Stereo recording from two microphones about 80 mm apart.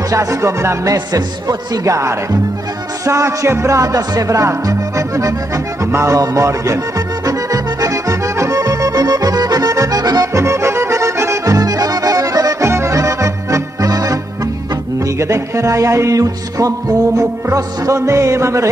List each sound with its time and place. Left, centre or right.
0.1 s speech: right
0.9 s speech: right
7.2 s accordion: right
10.4 s accordion: right
15.1 s speech: right